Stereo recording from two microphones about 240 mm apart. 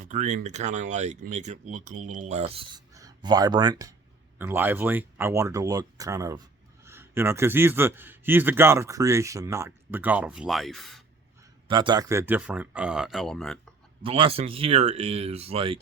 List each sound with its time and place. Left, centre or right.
0.0 s speech: right; by 11.0 s centre
11.7 s speech: centre
14.0 s speech: right